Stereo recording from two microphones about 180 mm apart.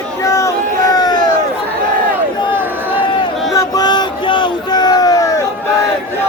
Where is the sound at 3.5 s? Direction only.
20° left (ahead or behind).